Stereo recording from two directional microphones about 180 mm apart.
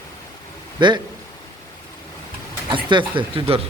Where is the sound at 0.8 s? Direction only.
25° right (ahead or behind).